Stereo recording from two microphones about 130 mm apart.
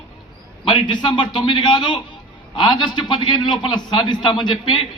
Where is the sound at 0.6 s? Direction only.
35° left (ahead or behind).